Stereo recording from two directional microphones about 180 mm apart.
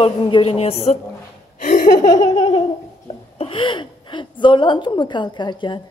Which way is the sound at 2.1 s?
20° left (ahead or behind).